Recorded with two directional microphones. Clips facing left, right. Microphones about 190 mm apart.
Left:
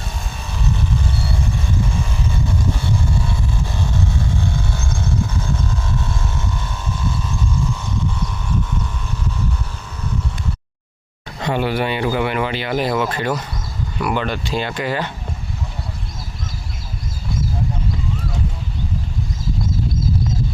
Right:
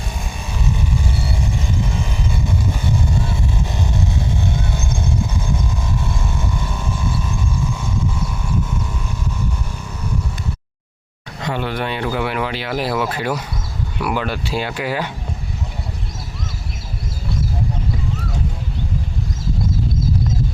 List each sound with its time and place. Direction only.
4.4 s vehicle: 20° right (ahead or behind)
11.6 s speech: 5° left (ahead or behind)